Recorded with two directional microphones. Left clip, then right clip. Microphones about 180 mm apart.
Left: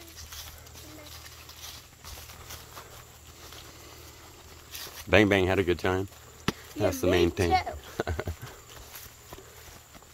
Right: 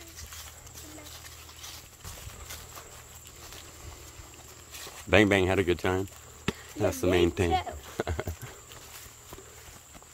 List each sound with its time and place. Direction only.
5.1 s speech: 5° right (ahead or behind)
6.5 s chop: 25° left (ahead or behind)
6.8 s speech: 5° right (ahead or behind)
8.0 s clip-clop: 5° right (ahead or behind)